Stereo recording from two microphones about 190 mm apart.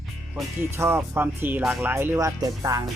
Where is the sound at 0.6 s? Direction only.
15° right (ahead or behind).